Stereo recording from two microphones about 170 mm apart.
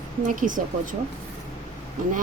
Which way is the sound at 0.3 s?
50° right (ahead or behind).